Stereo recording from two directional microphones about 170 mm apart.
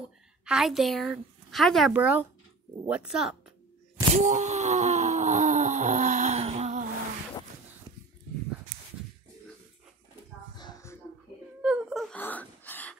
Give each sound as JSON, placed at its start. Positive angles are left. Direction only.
{"t": 0.5, "sound": "a woman's voice", "side_deg": 0}
{"t": 4.1, "sound": "groan", "side_deg": -45}
{"t": 10.6, "sound": "a sound", "side_deg": 15}
{"t": 11.6, "sound": "whimper", "side_deg": 0}
{"t": 12.2, "sound": "gasp", "side_deg": 10}